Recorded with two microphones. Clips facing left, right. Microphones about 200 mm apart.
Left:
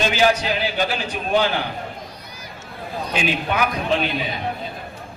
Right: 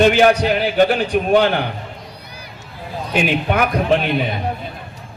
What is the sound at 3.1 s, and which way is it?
A man's voice, 55° right (ahead or behind).